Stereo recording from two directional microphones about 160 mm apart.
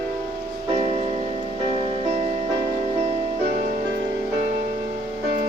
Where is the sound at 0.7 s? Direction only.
40° right (ahead or behind).